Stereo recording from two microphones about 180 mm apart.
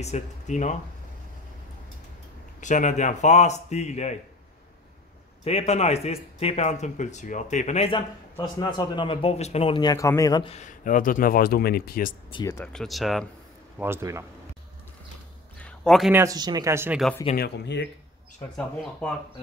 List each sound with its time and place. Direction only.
0.0 s speech: 40° left (ahead or behind)
2.6 s speech: 45° left (ahead or behind)
5.4 s speech: 35° left (ahead or behind); by 10.5 s 20° left (ahead or behind)
10.5 s speech: 45° left (ahead or behind)
12.3 s speech: 25° left (ahead or behind)
12.5 s speech: centre (ahead or behind)
13.7 s speech: 15° right (ahead or behind)
15.6 s a sound: 5° left (ahead or behind)
16.1 s speech: 15° right (ahead or behind)
17.4 s speech: 70° left (ahead or behind)
18.6 s speech: 5° left (ahead or behind)